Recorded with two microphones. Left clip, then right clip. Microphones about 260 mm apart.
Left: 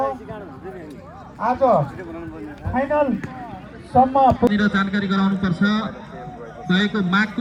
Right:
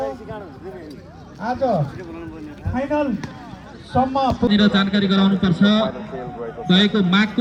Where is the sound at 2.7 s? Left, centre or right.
Left.